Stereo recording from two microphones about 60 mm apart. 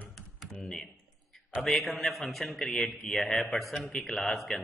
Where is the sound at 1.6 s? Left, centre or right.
Centre.